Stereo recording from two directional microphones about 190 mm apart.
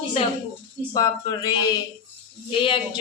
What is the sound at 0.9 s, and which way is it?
Speech, 20° left (ahead or behind).